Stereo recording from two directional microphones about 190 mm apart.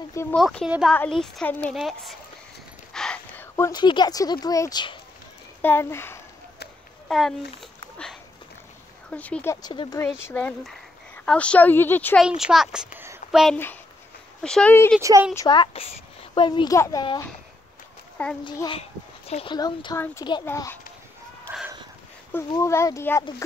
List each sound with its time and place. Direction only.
0.1 s speech: 15° left (ahead or behind)
0.4 s speech: 5° left (ahead or behind); by 4.9 s 20° left (ahead or behind)
5.6 s speech: 10° left (ahead or behind)
7.1 s speech: centre (ahead or behind)
9.1 s speech: 5° left (ahead or behind)
10.2 s speech: 10° left (ahead or behind)
12.2 s speech: 5° right (ahead or behind)
15.0 s a woman's voice: 15° right (ahead or behind)
15.3 s speech: 20° left (ahead or behind)
18.1 s a sound: 5° left (ahead or behind)
18.4 s speech: 25° left (ahead or behind)
21.5 s a sound: 10° right (ahead or behind)
22.5 s speech: 15° left (ahead or behind)